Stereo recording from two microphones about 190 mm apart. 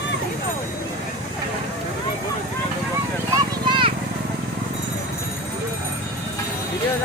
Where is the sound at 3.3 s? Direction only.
25° right (ahead or behind).